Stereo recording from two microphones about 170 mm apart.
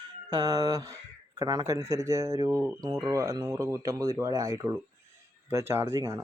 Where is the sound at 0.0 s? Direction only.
25° right (ahead or behind).